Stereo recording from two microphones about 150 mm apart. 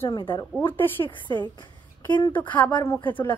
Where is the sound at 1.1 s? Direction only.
30° left (ahead or behind).